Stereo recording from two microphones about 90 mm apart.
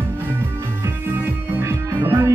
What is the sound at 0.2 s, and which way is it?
Music, 25° right (ahead or behind).